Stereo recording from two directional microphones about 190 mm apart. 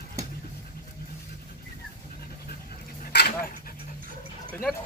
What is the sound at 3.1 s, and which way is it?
Dog, 60° left (ahead or behind).